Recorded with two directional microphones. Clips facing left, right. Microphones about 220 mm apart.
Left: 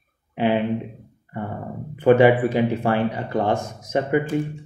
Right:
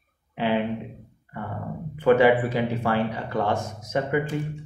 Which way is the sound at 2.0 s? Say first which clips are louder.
Left 3 dB; 20° left (ahead or behind).